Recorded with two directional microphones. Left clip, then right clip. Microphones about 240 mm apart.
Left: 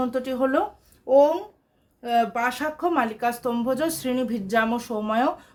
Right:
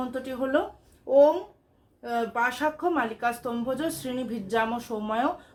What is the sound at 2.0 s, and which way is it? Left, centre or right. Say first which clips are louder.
Speech: left 4 dB; left.